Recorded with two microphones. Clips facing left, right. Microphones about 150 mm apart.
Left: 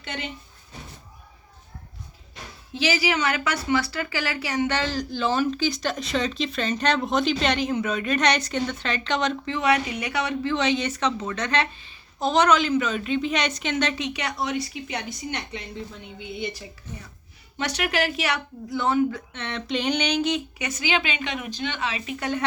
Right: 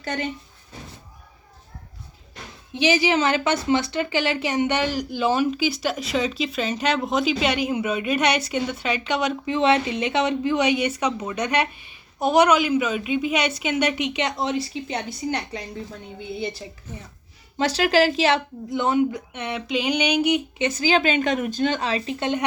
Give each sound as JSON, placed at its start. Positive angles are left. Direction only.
{"t": 0.0, "sound": "speech", "side_deg": -40}
{"t": 2.7, "sound": "a woman's voice", "side_deg": -20}
{"t": 9.6, "sound": "a woman's voice", "side_deg": -25}
{"t": 20.6, "sound": "a woman's voice", "side_deg": -30}